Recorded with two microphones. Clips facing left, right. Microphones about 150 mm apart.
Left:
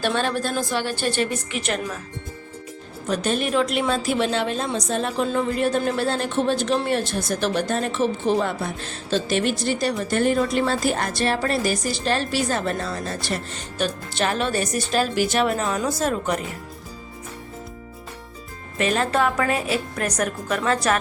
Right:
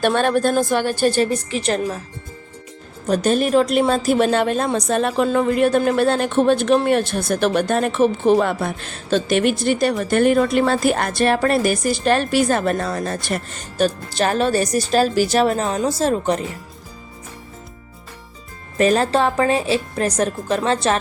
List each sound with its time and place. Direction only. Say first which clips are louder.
0.0 s a woman's voice: right 6 dB; 55° right (ahead or behind); by 2.0 s 35° right (ahead or behind)
3.1 s a woman's voice: right 6 dB; 40° right (ahead or behind)
18.8 s a woman's voice: right 5 dB; 35° right (ahead or behind)